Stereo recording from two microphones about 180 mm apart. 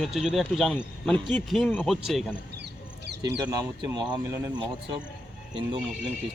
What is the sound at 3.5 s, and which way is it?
Speech, 20° right (ahead or behind).